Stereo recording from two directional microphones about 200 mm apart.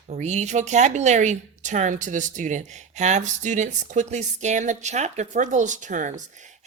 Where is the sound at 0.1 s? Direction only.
35° right (ahead or behind).